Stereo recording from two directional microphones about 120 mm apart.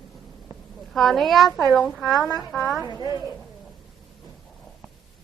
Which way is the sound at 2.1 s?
30° left (ahead or behind).